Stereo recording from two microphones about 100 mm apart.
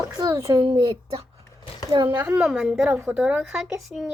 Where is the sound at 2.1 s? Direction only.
20° right (ahead or behind).